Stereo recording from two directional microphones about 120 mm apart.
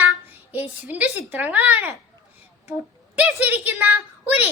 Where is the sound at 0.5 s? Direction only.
15° right (ahead or behind).